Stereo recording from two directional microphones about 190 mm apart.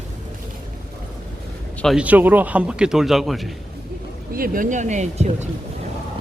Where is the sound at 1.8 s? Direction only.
5° right (ahead or behind).